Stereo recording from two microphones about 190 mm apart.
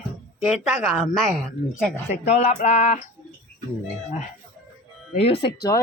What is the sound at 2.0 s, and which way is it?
Speech, 35° left (ahead or behind).